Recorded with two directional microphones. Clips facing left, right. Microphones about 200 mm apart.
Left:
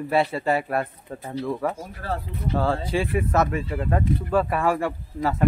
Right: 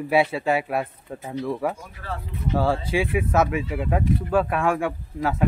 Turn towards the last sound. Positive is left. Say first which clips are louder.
# even
turn(degrees=0)  # may be behind; listen again after turning